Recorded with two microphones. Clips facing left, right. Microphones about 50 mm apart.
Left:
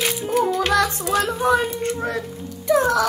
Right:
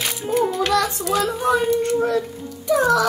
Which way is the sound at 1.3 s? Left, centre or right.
Centre.